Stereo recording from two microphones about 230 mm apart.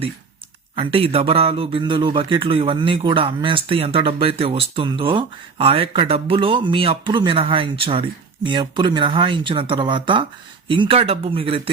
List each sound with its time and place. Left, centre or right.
0.8 s speech: right